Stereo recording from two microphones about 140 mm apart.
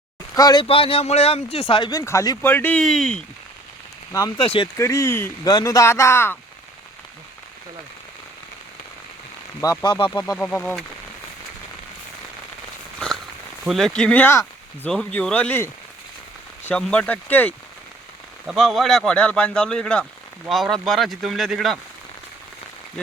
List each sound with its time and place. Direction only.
0.3 s speech: 25° left (ahead or behind)
0.6 s speech: 40° left (ahead or behind); by 2.8 s 15° left (ahead or behind)
2.8 s speech: centre (ahead or behind)
4.4 s speech: 40° left (ahead or behind)
4.8 s speech: 20° left (ahead or behind)
9.6 s speech: 25° left (ahead or behind)
10.3 s speech: 10° left (ahead or behind)
13.7 s speech: centre (ahead or behind)
18.4 s speech: centre (ahead or behind)